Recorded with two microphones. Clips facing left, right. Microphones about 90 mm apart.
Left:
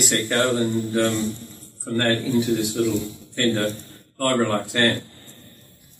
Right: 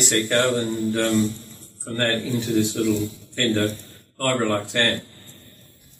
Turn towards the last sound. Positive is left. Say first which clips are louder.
# left 1 dB
turn(degrees=20)  # may be behind; listen again after turning